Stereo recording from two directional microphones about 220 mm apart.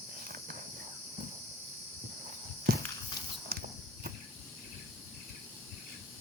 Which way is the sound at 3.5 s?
45° right (ahead or behind).